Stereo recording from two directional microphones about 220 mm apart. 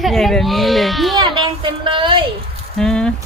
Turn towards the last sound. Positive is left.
turn(degrees=5)  # may be behind; listen again after turning